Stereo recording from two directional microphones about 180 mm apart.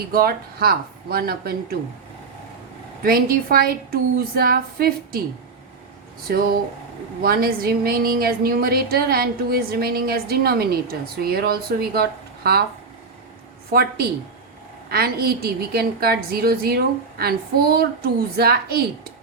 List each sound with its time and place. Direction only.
0.1 s a woman's voice: 55° right (ahead or behind)
3.0 s a woman's voice: 55° right (ahead or behind)
6.2 s a woman's voice: 55° right (ahead or behind)
13.7 s a woman's voice: 60° right (ahead or behind)